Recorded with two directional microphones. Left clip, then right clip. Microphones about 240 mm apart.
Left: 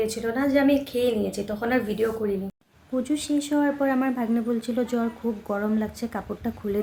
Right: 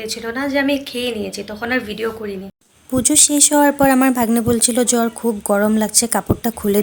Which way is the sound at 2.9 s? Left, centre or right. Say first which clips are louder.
Right 10 dB; right.